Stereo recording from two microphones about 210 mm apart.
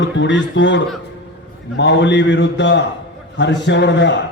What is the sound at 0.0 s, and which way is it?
A man's voice, 60° left (ahead or behind).